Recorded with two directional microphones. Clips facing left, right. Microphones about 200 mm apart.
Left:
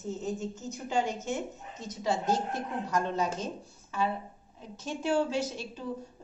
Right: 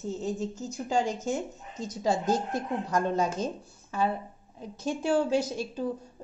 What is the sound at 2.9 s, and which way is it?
Speech, 50° right (ahead or behind).